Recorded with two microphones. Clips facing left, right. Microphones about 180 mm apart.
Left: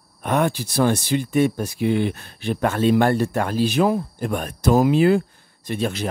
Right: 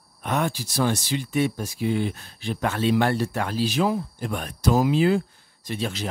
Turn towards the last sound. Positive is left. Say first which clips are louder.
# left 5 dB
turn(degrees=55)  # may be behind; listen again after turning